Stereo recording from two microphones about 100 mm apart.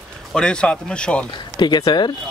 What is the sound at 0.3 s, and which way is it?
Speech, 5° left (ahead or behind).